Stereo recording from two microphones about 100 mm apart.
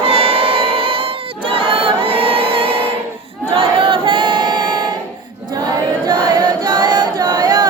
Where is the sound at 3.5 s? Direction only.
65° right (ahead or behind); by 5.0 s 45° right (ahead or behind).